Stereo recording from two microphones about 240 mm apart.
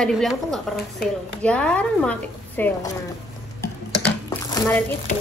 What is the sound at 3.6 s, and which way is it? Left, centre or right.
Dishes, centre.